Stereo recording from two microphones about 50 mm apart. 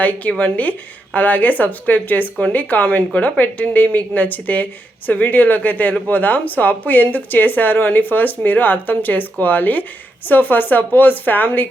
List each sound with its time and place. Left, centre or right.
0.0 s speech: left